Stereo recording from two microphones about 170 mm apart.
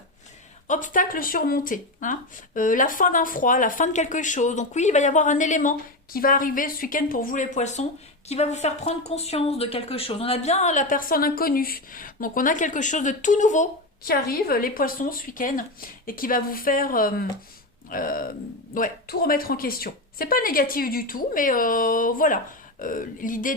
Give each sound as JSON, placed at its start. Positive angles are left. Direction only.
{"t": 0.7, "sound": "a woman's voice", "side_deg": 50}